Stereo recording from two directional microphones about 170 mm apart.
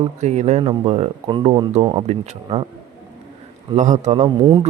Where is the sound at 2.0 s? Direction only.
40° right (ahead or behind).